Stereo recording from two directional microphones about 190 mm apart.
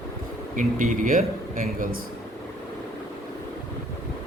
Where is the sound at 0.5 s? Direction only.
40° right (ahead or behind).